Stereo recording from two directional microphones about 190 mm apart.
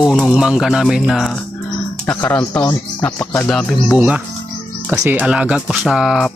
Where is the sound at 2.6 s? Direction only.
15° left (ahead or behind).